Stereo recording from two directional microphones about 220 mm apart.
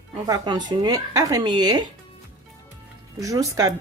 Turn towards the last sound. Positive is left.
turn(degrees=-15)  # may be behind; listen again after turning